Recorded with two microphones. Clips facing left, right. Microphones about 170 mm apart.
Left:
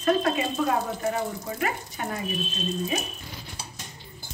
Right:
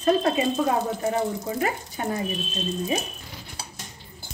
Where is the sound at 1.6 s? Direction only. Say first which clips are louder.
Even; 30° right (ahead or behind).